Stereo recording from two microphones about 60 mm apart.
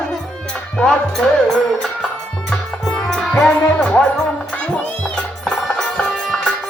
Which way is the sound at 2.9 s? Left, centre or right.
Centre.